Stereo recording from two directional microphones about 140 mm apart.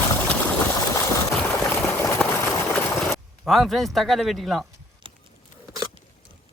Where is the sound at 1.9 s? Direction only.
15° left (ahead or behind).